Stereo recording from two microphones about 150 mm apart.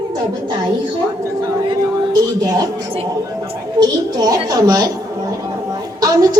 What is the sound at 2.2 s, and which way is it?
Music, 25° right (ahead or behind).